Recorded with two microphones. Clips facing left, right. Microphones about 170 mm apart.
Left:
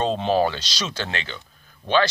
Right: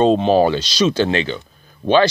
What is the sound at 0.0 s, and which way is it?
Speech, 20° right (ahead or behind).